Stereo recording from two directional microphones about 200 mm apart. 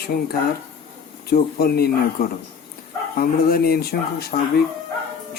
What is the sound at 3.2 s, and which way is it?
Speech, 50° left (ahead or behind).